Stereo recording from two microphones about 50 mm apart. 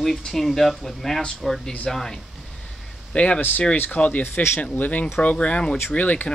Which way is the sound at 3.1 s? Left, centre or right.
Left.